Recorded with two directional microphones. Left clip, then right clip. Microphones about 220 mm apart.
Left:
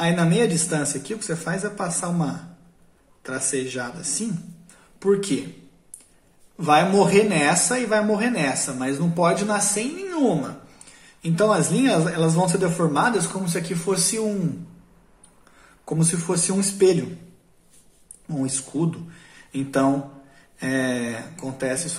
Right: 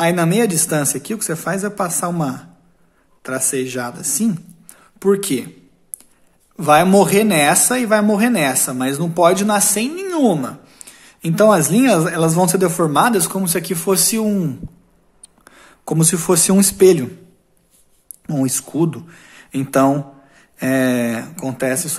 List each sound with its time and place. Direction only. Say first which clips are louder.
0.0 s speech: right 5 dB; 50° right (ahead or behind)
6.5 s speech: right 6 dB; 50° right (ahead or behind)
15.4 s a man's voice: right 8 dB; 50° right (ahead or behind)
18.2 s speech: right 7 dB; 45° right (ahead or behind)